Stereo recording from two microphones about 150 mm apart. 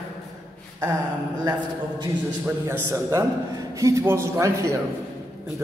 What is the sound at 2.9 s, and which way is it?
A man's voice, 20° right (ahead or behind).